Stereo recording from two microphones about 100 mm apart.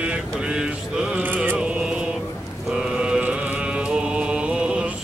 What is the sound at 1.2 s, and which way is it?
Chant, 15° right (ahead or behind).